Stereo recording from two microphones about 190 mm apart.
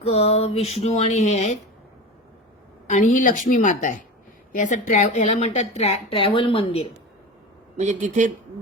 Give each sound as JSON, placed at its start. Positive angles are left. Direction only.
{"t": 0.0, "sound": "speech", "side_deg": 35}
{"t": 2.9, "sound": "speech", "side_deg": 40}
{"t": 7.8, "sound": "speech", "side_deg": -40}